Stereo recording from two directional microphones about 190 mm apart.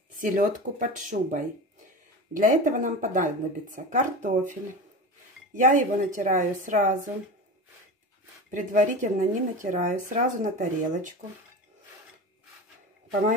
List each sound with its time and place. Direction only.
0.2 s speech: 45° right (ahead or behind)
8.5 s speech: 40° right (ahead or behind)